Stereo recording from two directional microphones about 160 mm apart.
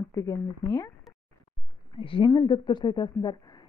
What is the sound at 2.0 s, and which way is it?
Speech, 35° left (ahead or behind).